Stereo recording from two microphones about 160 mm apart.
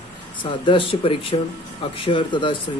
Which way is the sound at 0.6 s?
35° left (ahead or behind).